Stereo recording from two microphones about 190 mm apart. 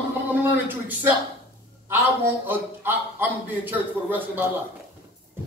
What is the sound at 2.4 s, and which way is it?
A man's voice, 10° right (ahead or behind).